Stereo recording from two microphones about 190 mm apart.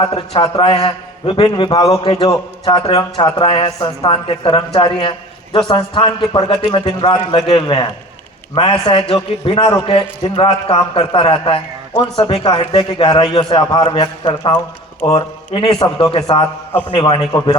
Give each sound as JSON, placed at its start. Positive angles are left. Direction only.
{"t": 0.1, "sound": "a man's voice", "side_deg": 30}